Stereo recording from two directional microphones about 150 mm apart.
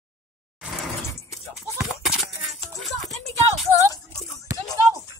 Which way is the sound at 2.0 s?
Centre (ahead or behind).